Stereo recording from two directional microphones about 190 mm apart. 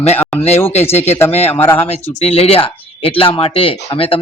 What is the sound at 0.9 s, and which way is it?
Speech, 35° left (ahead or behind).